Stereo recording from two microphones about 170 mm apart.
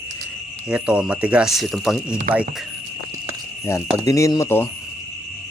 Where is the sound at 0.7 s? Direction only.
5° right (ahead or behind).